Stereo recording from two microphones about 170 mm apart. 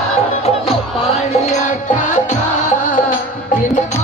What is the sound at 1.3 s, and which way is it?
Music, 45° left (ahead or behind).